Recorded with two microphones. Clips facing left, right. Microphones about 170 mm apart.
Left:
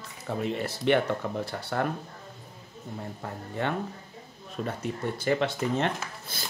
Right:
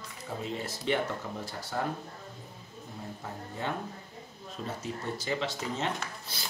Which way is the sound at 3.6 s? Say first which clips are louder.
Left 5 dB; 65° left (ahead or behind).